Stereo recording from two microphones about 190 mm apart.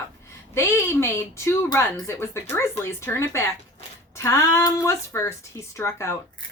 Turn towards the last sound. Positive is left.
turn(degrees=15)  # may be behind; listen again after turning